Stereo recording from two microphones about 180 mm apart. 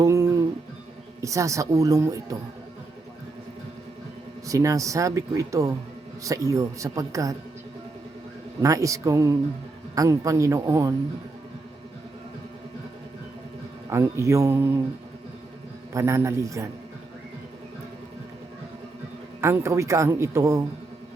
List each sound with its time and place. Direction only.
0.0 s music: 15° right (ahead or behind)
1.2 s speech: 15° right (ahead or behind)
4.4 s speech: 20° right (ahead or behind)
8.6 s speech: 20° right (ahead or behind)
13.9 s speech: 15° right (ahead or behind)
15.9 s speech: 15° right (ahead or behind)
19.4 s speech: 15° right (ahead or behind)